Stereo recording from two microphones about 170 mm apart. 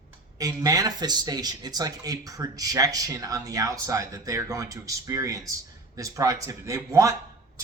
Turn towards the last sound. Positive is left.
turn(degrees=-20)  # may be behind; listen again after turning